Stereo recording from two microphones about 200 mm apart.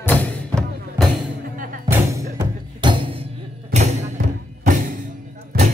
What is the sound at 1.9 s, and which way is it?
Music, 15° right (ahead or behind).